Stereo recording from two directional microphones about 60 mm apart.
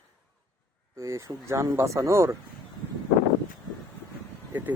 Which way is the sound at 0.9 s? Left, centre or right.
Right.